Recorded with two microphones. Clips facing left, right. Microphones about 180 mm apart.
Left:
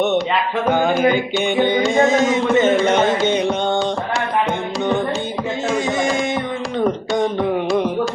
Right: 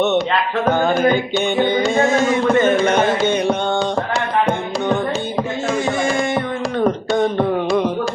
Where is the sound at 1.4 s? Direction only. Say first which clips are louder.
Even; 15° left (ahead or behind).